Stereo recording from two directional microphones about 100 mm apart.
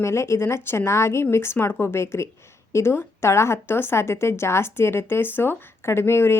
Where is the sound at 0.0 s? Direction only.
30° left (ahead or behind).